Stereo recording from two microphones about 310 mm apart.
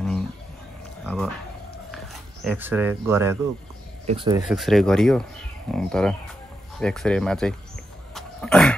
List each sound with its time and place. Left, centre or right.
1.0 s a sound: centre
2.4 s speech: centre
4.0 s speech: centre
4.4 s speech: centre
8.1 s dog: centre